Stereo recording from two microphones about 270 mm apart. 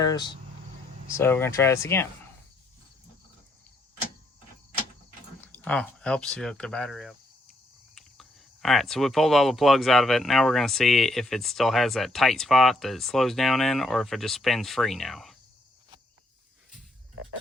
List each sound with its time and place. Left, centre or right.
0.0 s speech: centre
5.4 s speech: centre